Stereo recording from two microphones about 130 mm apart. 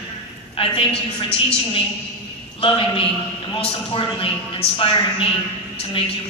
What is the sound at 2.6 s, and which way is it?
A man's voice, 45° left (ahead or behind).